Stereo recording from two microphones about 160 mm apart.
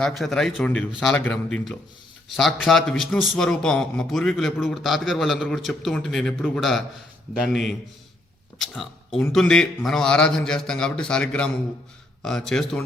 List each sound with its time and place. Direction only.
0.0 s a man's voice: centre (ahead or behind)